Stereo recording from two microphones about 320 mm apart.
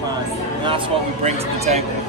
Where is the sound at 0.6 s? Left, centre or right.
Centre.